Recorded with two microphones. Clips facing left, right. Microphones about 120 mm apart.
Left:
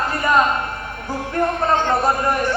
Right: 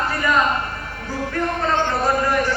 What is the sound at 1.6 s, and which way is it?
Speech, 25° left (ahead or behind).